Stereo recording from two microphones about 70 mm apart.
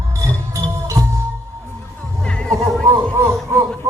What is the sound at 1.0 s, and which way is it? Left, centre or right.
Music, right.